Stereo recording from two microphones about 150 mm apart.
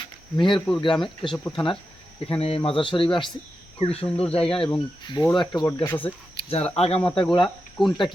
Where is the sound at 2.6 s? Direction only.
35° left (ahead or behind).